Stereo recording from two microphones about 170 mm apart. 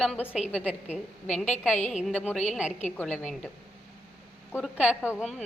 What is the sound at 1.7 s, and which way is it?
Speech, 45° left (ahead or behind).